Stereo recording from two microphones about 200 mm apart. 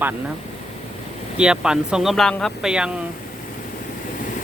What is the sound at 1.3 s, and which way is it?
Speech, 5° right (ahead or behind).